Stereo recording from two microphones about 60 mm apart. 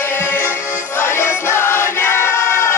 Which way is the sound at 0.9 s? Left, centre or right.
Left.